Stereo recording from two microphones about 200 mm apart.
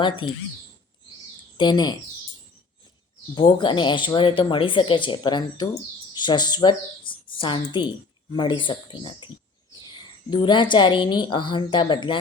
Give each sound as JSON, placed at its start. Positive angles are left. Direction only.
{"t": 1.5, "sound": "a woman's voice", "side_deg": 20}
{"t": 3.3, "sound": "a woman's voice", "side_deg": 25}